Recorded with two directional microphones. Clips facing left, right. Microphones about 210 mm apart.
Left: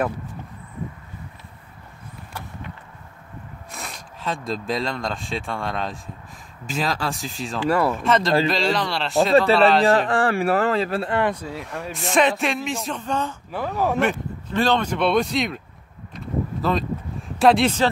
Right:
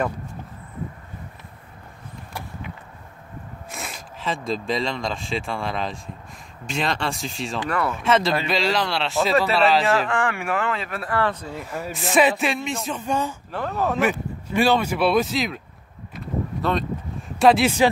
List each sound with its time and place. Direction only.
3.7 s speech: centre (ahead or behind)
9.8 s speech: 35° left (ahead or behind); by 11.4 s 15° left (ahead or behind)
11.5 s speech: centre (ahead or behind)
13.5 s speech: 10° left (ahead or behind)
13.9 s speech: 10° right (ahead or behind)
16.6 s speech: centre (ahead or behind)